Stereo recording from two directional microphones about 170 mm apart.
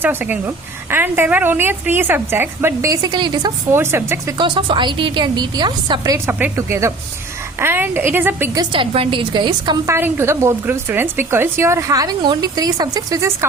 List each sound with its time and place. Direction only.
0.0 s a woman's voice: 10° right (ahead or behind)
3.8 s a woman's voice: 15° right (ahead or behind)
4.4 s a woman's voice: 30° right (ahead or behind); by 8.6 s 10° right (ahead or behind)
8.7 s a woman's voice: 30° right (ahead or behind)
9.9 s a woman's voice: 15° right (ahead or behind)